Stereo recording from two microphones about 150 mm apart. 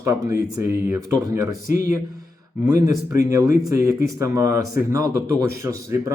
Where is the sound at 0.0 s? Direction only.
20° right (ahead or behind).